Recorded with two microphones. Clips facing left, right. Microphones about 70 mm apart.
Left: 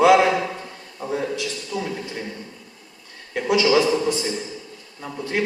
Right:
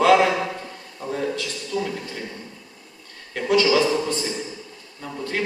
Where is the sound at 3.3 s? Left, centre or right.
Centre.